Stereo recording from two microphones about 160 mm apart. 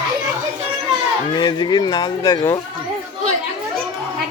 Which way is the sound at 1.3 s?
25° left (ahead or behind).